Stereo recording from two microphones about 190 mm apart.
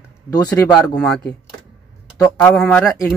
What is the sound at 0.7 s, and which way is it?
Speech, 5° left (ahead or behind).